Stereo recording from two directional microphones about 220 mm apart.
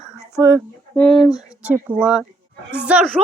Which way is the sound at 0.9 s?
5° left (ahead or behind).